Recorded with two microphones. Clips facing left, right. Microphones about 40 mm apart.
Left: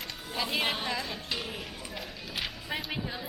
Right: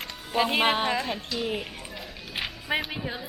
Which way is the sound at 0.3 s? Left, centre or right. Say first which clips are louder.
Right 8 dB; right.